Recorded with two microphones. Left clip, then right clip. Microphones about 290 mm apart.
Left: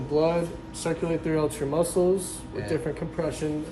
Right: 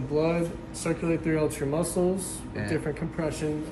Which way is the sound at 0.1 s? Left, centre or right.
Left.